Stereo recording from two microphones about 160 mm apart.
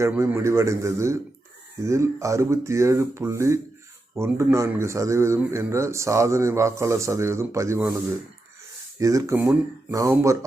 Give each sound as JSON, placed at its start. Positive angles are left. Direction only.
{"t": 0.1, "sound": "speech", "side_deg": -15}
{"t": 9.0, "sound": "speech", "side_deg": -20}